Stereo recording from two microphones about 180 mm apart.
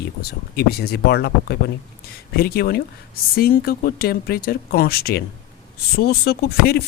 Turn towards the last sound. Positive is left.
turn(degrees=60)  # may be behind; listen again after turning